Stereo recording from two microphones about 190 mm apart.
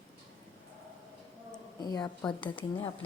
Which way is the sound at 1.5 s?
20° left (ahead or behind).